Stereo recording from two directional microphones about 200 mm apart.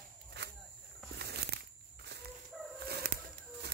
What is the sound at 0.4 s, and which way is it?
Walk, 55° right (ahead or behind).